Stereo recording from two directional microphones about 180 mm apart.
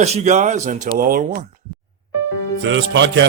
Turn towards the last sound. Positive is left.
turn(degrees=-80)